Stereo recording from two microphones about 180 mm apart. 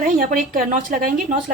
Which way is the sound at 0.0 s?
50° right (ahead or behind).